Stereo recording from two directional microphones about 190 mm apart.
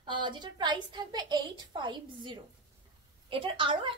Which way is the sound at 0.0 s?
25° right (ahead or behind).